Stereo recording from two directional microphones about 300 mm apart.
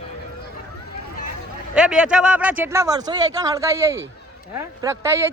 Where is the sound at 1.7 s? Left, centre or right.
Centre.